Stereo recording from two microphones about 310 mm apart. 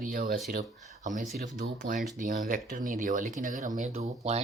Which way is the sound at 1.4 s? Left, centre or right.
Right.